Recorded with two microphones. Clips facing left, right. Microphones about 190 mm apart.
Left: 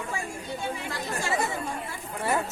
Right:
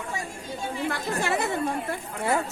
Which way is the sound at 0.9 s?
60° right (ahead or behind).